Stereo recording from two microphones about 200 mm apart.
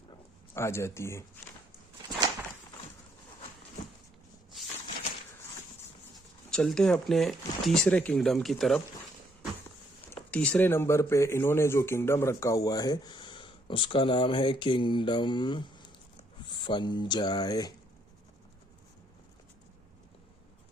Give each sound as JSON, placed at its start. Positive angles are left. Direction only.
{"t": 0.5, "sound": "speech", "side_deg": 15}
{"t": 6.5, "sound": "speech", "side_deg": 5}
{"t": 10.1, "sound": "speech", "side_deg": 5}